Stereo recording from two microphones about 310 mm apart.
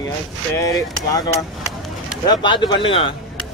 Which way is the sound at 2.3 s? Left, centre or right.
Centre.